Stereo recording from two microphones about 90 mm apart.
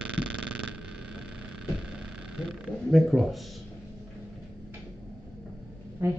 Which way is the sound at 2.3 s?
Centre (ahead or behind).